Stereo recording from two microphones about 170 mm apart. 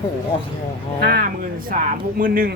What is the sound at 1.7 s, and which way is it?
Speech, 55° right (ahead or behind).